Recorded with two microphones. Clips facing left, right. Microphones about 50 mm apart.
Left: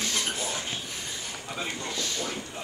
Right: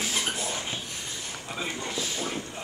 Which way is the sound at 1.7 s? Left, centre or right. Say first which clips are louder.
Right 1 dB; centre.